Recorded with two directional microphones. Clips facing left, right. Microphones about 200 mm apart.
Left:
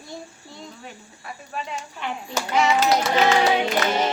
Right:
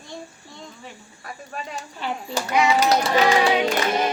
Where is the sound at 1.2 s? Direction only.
40° right (ahead or behind).